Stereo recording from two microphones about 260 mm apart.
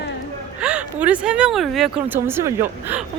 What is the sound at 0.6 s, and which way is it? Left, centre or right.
Speech, centre.